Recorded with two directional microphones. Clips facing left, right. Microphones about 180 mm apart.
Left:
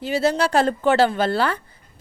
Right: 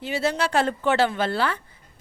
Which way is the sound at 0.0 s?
40° left (ahead or behind).